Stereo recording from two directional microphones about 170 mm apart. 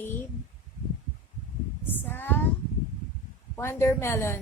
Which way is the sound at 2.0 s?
10° left (ahead or behind).